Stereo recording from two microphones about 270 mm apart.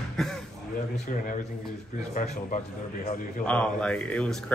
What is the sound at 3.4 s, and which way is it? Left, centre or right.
Speech, centre.